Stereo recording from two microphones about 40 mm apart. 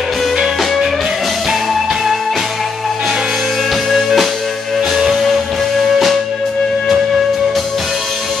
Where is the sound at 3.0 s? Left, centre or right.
Centre.